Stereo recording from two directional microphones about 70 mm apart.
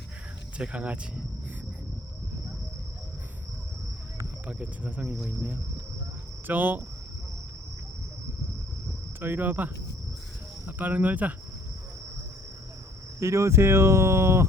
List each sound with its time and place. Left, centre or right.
0.6 s speech: centre
4.4 s speech: right
6.5 s speech: right
9.2 s speech: right
13.1 s speech: right